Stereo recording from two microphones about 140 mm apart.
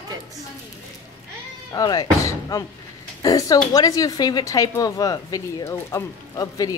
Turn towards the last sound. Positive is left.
turn(degrees=25)  # may be behind; listen again after turning